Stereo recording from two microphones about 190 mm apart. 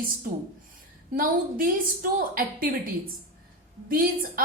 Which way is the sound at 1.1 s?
50° right (ahead or behind).